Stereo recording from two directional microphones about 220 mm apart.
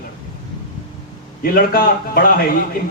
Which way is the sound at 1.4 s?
40° left (ahead or behind).